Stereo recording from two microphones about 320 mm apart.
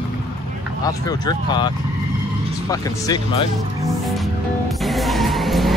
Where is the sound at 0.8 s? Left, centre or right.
Centre.